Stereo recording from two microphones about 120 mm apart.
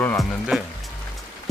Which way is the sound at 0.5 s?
Centre (ahead or behind).